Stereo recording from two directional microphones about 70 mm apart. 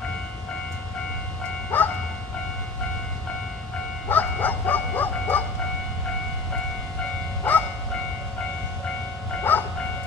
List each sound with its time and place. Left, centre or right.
1.7 s train: left
4.1 s bow-wow: left
7.5 s train: left
9.5 s train: left